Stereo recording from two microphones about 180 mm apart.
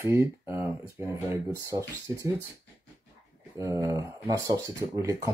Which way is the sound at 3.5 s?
15° right (ahead or behind).